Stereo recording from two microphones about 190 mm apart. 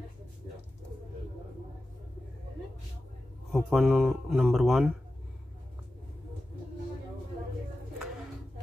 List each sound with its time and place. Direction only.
3.5 s speech: centre (ahead or behind)